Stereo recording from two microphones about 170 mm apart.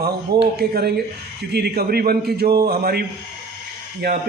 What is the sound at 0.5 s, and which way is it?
A man's voice, 65° right (ahead or behind).